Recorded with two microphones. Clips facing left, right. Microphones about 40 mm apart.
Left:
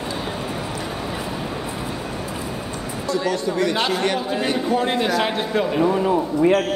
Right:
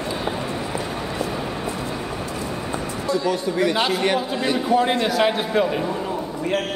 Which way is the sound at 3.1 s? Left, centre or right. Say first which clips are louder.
Even; centre.